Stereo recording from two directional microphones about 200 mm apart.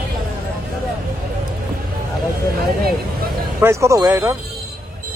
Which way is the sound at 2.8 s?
50° right (ahead or behind).